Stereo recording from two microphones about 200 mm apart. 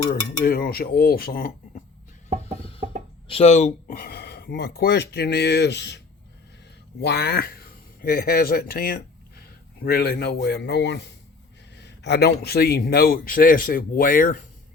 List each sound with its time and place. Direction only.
0.1 s speech: 50° left (ahead or behind)
2.4 s music: 30° left (ahead or behind)
3.2 s speech: 30° left (ahead or behind); by 6.0 s 60° left (ahead or behind)
7.0 s speech: 55° left (ahead or behind)